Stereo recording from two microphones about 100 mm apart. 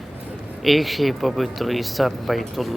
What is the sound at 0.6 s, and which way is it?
Speech, centre (ahead or behind).